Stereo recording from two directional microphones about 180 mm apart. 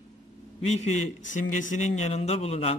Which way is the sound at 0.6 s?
40° left (ahead or behind).